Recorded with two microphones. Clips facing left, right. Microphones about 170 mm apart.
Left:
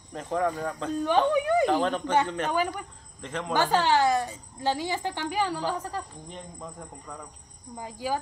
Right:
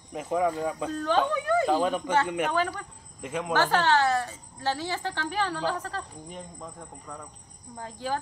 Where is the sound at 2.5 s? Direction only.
15° left (ahead or behind).